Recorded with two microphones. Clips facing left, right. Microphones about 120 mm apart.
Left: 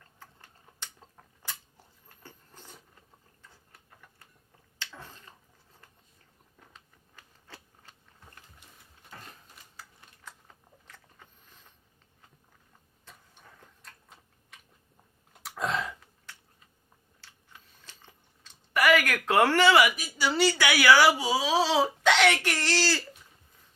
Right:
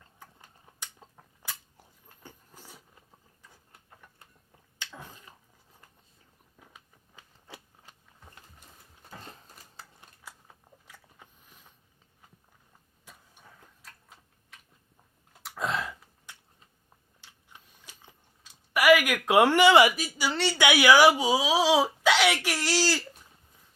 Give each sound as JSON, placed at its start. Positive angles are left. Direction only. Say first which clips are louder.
{"t": 0.2, "sound": "a sound", "louder": "right 1 dB", "side_deg": -15}
{"t": 3.4, "sound": "tick-tock", "louder": "even", "side_deg": -15}
{"t": 4.8, "sound": "dog", "louder": "right 1 dB", "side_deg": -15}
{"t": 6.6, "sound": "a sound", "louder": "right 1 dB", "side_deg": -10}
{"t": 9.2, "sound": "a sound", "louder": "right 3 dB", "side_deg": -25}
{"t": 10.3, "sound": "a sound", "louder": "even", "side_deg": -10}
{"t": 13.1, "sound": "vehicle", "louder": "even", "side_deg": -10}
{"t": 13.8, "sound": "tick-tock", "louder": "right 1 dB", "side_deg": 0}
{"t": 15.3, "sound": "burping", "louder": "even", "side_deg": 0}
{"t": 17.2, "sound": "chewing", "louder": "right 1 dB", "side_deg": -15}
{"t": 20.3, "sound": "speech", "louder": "left 6 dB", "side_deg": 0}
{"t": 20.6, "sound": "speech", "louder": "right 4 dB", "side_deg": -20}